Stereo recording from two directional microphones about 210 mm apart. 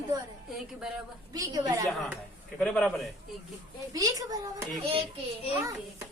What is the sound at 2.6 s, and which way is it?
Speech, 5° left (ahead or behind).